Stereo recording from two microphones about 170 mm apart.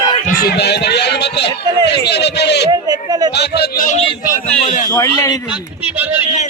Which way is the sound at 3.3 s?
75° left (ahead or behind).